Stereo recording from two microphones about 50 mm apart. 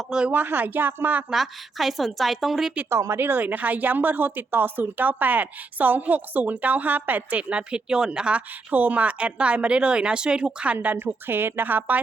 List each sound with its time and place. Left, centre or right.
0.3 s a woman's voice: right
1.3 s a woman's voice: centre
2.9 s speech: right
3.2 s a woman's voice: right
7.5 s speech: centre
10.9 s a woman's voice: right